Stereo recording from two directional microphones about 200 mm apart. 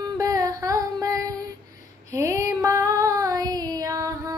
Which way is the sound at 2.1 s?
15° right (ahead or behind).